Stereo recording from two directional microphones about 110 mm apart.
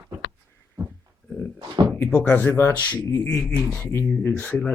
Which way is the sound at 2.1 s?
15° left (ahead or behind).